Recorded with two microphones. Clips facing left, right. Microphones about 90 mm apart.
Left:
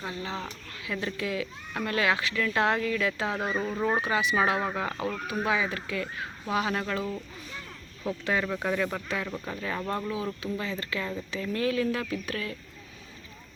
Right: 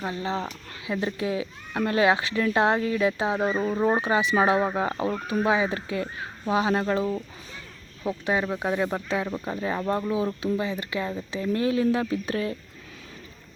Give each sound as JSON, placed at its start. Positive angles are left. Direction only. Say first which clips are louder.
{"t": 0.0, "sound": "speech", "louder": "right 6 dB", "side_deg": -30}